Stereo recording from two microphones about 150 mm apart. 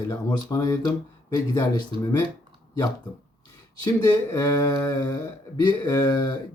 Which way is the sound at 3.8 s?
25° left (ahead or behind).